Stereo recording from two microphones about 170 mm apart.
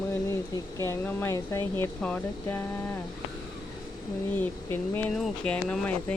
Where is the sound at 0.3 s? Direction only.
15° left (ahead or behind).